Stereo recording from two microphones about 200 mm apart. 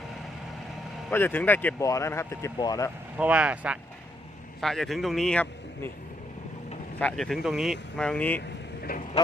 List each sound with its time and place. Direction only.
1.1 s speech: 10° left (ahead or behind)
3.2 s speech: 5° right (ahead or behind)
7.0 s speech: centre (ahead or behind)
8.4 s vehicle: 50° left (ahead or behind)